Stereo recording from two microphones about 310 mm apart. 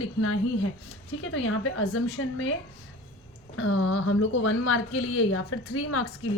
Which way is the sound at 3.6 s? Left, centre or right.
Left.